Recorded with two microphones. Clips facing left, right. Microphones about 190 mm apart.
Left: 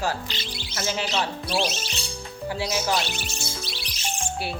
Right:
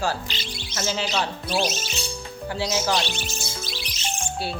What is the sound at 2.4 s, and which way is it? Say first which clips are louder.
Speech: right 1 dB; 10° left (ahead or behind).